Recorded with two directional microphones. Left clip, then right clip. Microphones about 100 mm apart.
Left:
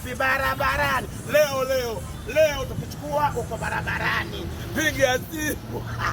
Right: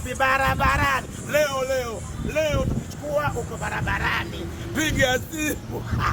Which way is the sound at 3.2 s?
30° right (ahead or behind).